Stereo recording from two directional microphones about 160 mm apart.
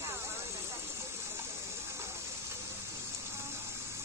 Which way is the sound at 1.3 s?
15° right (ahead or behind).